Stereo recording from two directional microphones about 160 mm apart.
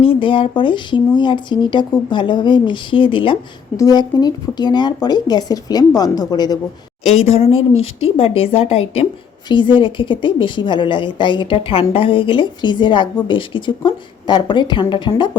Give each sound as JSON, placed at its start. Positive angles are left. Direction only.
{"t": 0.0, "sound": "a woman's voice", "side_deg": 35}
{"t": 7.3, "sound": "a woman's voice", "side_deg": 35}